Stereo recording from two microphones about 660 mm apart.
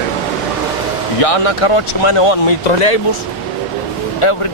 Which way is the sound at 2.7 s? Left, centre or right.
Left.